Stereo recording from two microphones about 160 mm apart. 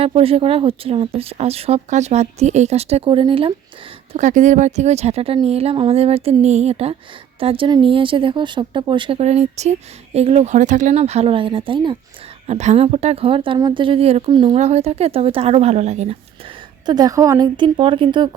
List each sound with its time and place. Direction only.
0.0 s speech: 35° right (ahead or behind)
4.1 s speech: 50° right (ahead or behind)
16.8 s a woman's voice: 25° right (ahead or behind)